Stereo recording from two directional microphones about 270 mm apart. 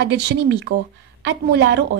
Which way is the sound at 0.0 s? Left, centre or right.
Right.